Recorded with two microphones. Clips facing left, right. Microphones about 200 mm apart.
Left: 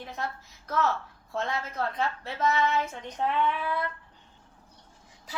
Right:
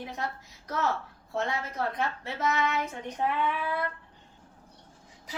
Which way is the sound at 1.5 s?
15° right (ahead or behind).